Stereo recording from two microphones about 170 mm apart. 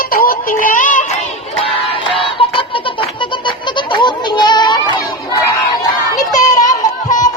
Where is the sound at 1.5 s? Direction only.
35° left (ahead or behind).